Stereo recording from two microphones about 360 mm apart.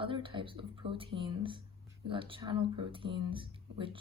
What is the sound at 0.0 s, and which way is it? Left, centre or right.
Speech, centre.